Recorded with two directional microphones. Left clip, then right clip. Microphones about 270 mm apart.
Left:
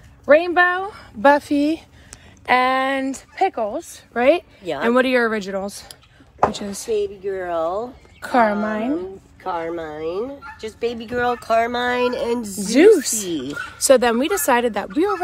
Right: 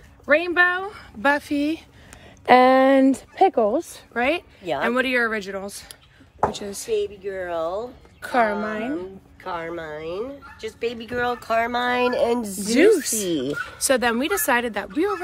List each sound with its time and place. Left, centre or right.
0.2 s speech: centre
2.4 s speech: right
4.1 s a woman's voice: centre
6.4 s speech: left; by 12.5 s right
12.6 s speech: centre